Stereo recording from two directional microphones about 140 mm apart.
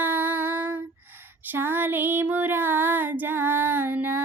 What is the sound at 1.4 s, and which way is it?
Child singing, 15° right (ahead or behind).